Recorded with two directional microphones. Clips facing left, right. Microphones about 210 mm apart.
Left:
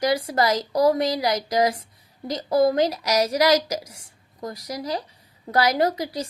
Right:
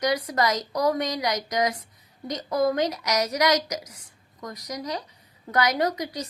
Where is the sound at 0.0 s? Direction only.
30° left (ahead or behind).